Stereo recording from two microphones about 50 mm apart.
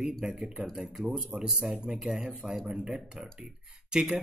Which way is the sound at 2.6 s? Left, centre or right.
Centre.